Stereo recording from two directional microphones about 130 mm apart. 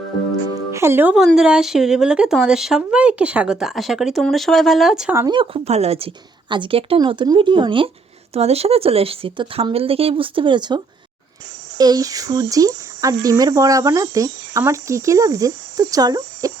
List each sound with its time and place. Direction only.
0.7 s speech: 20° right (ahead or behind)
1.1 s speech: centre (ahead or behind)
5.3 s speech: 40° right (ahead or behind)
5.6 s speech: 55° right (ahead or behind)
8.3 s speech: 50° right (ahead or behind); by 10.8 s 35° right (ahead or behind)
11.8 s speech: 30° right (ahead or behind)